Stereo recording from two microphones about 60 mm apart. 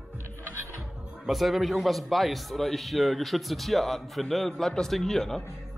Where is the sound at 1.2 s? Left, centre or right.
Centre.